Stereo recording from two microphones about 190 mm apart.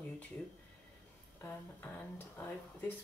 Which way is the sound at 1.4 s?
10° left (ahead or behind).